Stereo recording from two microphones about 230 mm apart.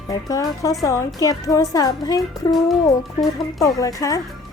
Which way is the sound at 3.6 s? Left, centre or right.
Centre.